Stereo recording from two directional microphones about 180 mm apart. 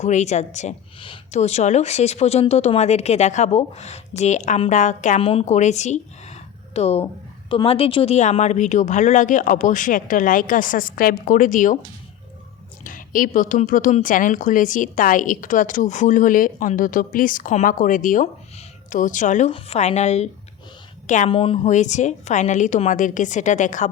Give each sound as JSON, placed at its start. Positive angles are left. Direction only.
{"t": 0.0, "sound": "a woman's voice", "side_deg": 40}
{"t": 12.8, "sound": "a woman's voice", "side_deg": 50}
{"t": 21.7, "sound": "a woman's voice", "side_deg": 40}